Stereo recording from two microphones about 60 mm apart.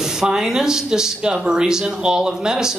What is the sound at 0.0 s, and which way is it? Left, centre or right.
Speech, centre.